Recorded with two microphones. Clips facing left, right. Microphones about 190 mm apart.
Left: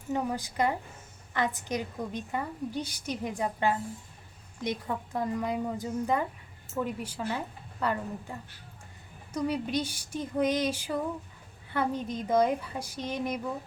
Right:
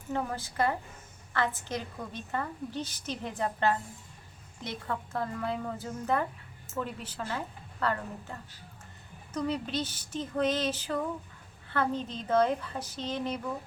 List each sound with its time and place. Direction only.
0.1 s a woman's voice: 15° left (ahead or behind)